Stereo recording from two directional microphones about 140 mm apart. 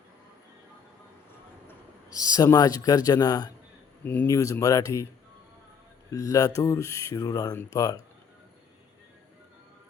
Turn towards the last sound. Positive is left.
turn(degrees=25)  # may be behind; listen again after turning